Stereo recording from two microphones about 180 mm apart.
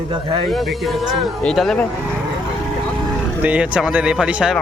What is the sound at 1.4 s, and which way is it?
Speech, centre (ahead or behind).